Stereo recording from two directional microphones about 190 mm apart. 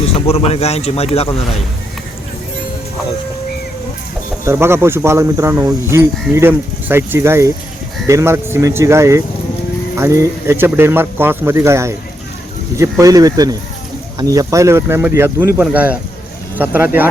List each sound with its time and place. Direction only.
0.0 s speech: 30° left (ahead or behind)
4.4 s speech: 15° right (ahead or behind)